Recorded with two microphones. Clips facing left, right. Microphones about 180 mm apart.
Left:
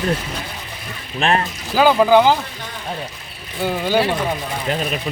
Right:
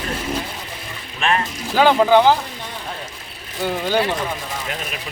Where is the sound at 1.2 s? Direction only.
35° left (ahead or behind).